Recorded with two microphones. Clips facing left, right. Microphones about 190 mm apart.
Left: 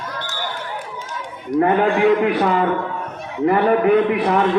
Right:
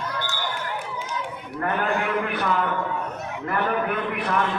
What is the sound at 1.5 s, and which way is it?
A man's voice, 85° left.